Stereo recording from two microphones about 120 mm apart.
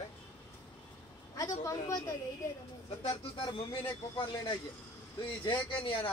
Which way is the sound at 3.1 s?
45° left (ahead or behind).